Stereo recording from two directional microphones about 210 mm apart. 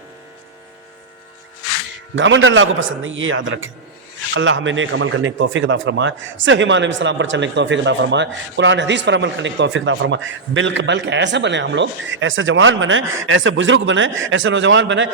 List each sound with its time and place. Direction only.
2.1 s a man's voice: 60° right (ahead or behind)